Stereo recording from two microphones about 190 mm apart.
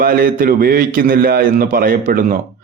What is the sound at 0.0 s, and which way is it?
A man's voice, 50° right (ahead or behind).